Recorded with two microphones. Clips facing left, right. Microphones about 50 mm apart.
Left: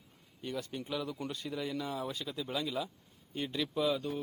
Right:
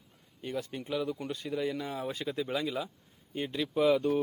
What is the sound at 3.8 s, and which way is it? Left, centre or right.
Speech, right.